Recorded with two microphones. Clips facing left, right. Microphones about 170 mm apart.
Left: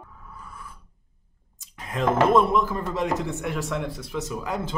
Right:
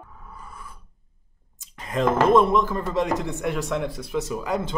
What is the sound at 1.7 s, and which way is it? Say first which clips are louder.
Speech: right 1 dB; centre (ahead or behind).